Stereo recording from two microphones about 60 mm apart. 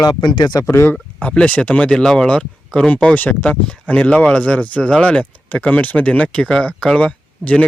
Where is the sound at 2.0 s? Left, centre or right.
Centre.